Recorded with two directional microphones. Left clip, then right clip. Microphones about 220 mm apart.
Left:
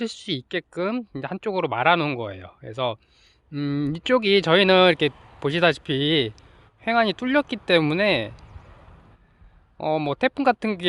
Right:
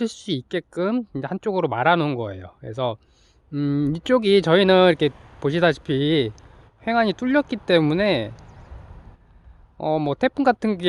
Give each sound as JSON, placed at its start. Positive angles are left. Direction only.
{"t": 0.0, "sound": "speech", "side_deg": -15}
{"t": 5.1, "sound": "a sound", "side_deg": 30}
{"t": 5.4, "sound": "speech", "side_deg": -5}
{"t": 9.7, "sound": "speech", "side_deg": -10}